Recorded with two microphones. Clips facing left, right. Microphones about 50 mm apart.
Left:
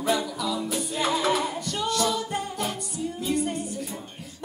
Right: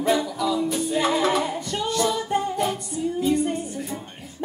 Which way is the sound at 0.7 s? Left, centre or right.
Centre.